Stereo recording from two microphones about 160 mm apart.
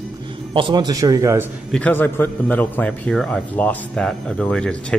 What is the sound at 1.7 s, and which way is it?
A man's voice, 10° left (ahead or behind).